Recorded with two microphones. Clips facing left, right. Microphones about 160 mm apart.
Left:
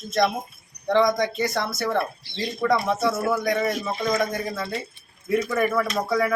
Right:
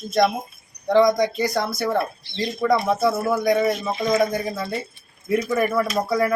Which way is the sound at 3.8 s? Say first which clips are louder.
Right 4 dB; 15° right (ahead or behind).